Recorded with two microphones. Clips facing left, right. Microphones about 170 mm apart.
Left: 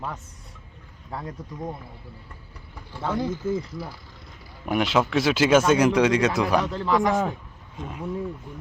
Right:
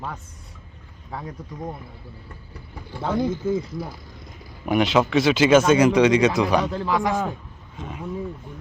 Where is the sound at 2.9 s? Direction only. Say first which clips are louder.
Right 3 dB; 15° right (ahead or behind).